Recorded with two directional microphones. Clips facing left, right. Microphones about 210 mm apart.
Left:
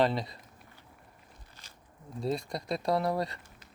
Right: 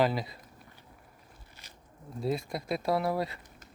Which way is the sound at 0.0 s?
5° right (ahead or behind).